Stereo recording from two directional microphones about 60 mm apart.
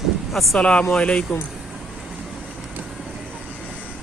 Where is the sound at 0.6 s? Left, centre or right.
Centre.